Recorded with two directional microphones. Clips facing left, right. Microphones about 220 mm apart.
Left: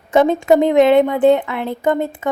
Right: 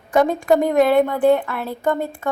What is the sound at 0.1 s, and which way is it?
A woman's voice, 25° left (ahead or behind).